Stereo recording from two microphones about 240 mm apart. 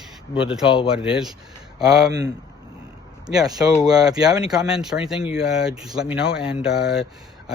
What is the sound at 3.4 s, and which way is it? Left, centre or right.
Speech, centre.